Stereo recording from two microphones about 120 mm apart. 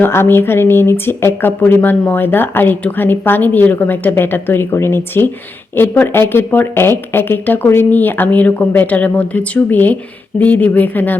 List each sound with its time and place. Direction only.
0.0 s speech: 20° left (ahead or behind)